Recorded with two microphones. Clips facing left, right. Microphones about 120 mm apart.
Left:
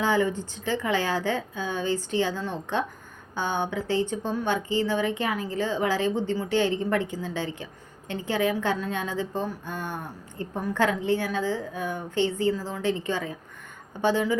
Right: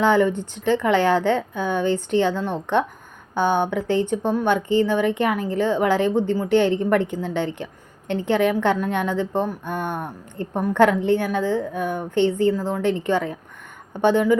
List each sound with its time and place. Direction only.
0.0 s a woman's voice: 60° right (ahead or behind)